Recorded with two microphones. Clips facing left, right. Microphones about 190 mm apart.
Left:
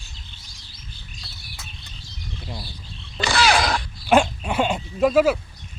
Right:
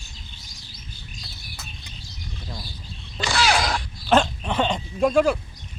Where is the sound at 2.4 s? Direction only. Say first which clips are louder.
Left 2 dB; 10° left (ahead or behind).